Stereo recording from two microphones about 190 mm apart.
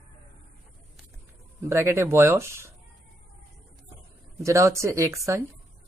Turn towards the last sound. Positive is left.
turn(degrees=-15)  # may be behind; listen again after turning